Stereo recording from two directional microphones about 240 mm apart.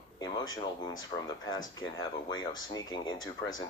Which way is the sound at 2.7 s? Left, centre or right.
Centre.